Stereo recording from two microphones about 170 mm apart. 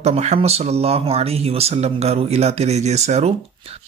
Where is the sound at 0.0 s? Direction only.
40° right (ahead or behind).